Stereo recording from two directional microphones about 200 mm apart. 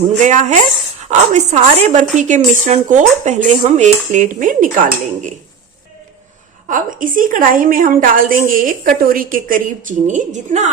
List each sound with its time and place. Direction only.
0.2 s a woman's voice: 35° right (ahead or behind)
6.7 s a woman's voice: 40° right (ahead or behind)